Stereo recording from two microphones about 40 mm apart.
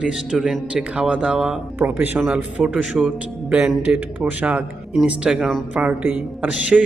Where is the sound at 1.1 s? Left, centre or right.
Right.